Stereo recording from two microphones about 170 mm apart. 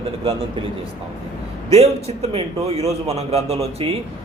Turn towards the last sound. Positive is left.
turn(degrees=-35)  # may be behind; listen again after turning